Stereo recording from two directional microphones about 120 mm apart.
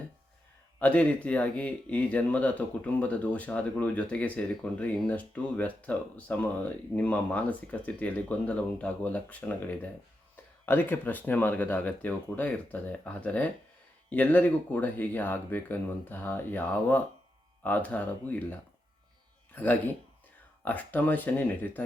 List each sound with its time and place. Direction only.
0.8 s speech: 10° left (ahead or behind)
20.7 s speech: 15° left (ahead or behind)